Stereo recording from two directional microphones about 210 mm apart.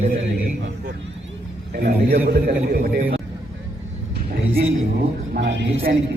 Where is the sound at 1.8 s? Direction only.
45° right (ahead or behind).